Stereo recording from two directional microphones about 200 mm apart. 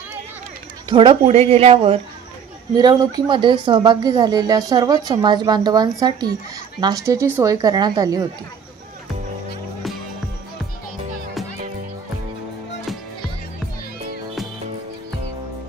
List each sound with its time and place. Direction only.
0.9 s speech: 25° right (ahead or behind)